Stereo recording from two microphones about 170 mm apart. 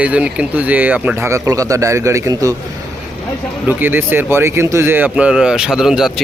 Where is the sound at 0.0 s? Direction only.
10° right (ahead or behind).